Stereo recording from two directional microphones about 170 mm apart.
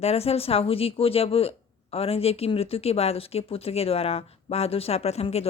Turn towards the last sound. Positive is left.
turn(degrees=35)  # may be behind; listen again after turning